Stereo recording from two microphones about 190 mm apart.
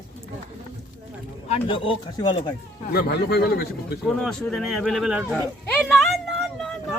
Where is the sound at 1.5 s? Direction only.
25° left (ahead or behind).